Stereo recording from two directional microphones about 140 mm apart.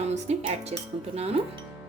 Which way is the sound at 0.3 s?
50° right (ahead or behind).